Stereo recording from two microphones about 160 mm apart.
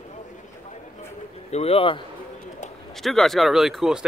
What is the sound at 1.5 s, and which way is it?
Speech, 40° left (ahead or behind).